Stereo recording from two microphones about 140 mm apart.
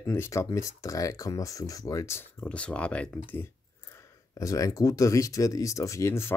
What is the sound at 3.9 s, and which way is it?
Speech, 25° left (ahead or behind).